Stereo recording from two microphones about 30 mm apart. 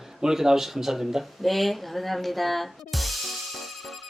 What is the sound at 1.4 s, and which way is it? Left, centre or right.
Music, centre.